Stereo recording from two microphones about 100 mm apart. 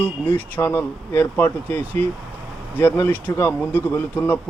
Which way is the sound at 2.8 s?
20° left (ahead or behind).